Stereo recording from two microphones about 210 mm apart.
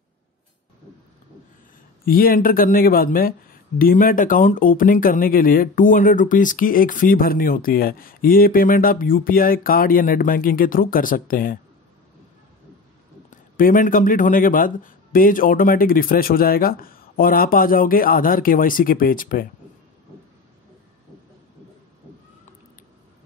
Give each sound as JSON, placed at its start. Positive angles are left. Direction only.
{"t": 2.0, "sound": "speech", "side_deg": 45}
{"t": 13.3, "sound": "speech", "side_deg": 40}